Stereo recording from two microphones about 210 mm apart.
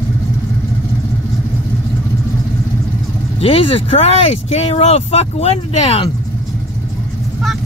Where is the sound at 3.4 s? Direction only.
25° left (ahead or behind).